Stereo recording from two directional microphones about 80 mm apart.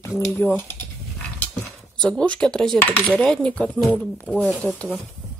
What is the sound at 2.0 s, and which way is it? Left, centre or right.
Speech, centre.